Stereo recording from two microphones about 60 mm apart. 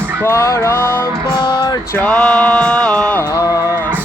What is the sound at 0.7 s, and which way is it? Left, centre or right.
Music, left.